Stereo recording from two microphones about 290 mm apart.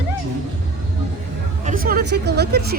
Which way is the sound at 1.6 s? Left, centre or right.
Right.